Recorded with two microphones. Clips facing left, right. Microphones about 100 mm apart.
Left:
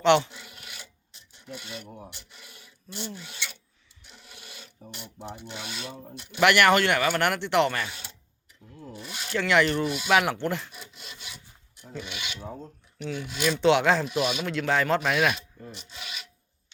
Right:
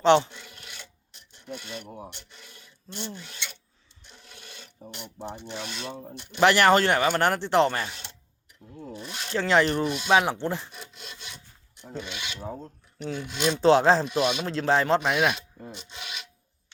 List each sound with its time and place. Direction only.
0.0 s speech: 35° right (ahead or behind)
0.3 s filing: 5° left (ahead or behind)
1.5 s speech: 10° left (ahead or behind)
2.0 s rub: 10° left (ahead or behind)
4.1 s filing: 10° left (ahead or behind)
6.4 s speech: 30° right (ahead or behind)
7.9 s speech: 5° left (ahead or behind)
9.0 s filing: 5° left (ahead or behind)
9.3 s speech: 35° right (ahead or behind)
10.7 s sawing: 5° left (ahead or behind)
12.0 s speech: 10° left (ahead or behind)
13.0 s speech: 40° right (ahead or behind)
15.7 s rub: centre (ahead or behind)